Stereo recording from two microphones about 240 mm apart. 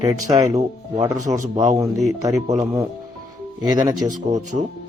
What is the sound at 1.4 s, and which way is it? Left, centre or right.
Speech, right.